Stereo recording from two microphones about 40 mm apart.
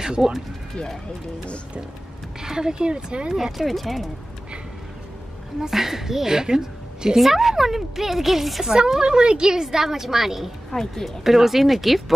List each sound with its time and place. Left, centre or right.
0.0 s speech: centre
2.4 s speech: centre
3.3 s a woman's voice: centre
5.6 s a woman's voice: centre
7.2 s a woman's voice: centre
8.7 s a woman's voice: centre
10.7 s a woman's voice: centre
11.2 s a woman's voice: centre